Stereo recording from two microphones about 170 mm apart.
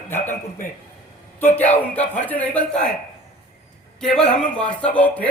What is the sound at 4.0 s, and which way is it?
A man's voice, 5° left (ahead or behind).